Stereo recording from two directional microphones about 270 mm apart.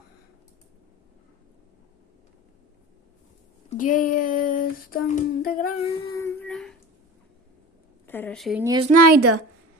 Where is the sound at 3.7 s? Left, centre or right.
Left.